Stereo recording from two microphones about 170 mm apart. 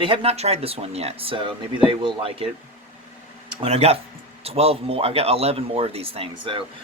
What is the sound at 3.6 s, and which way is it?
Speech, 40° right (ahead or behind).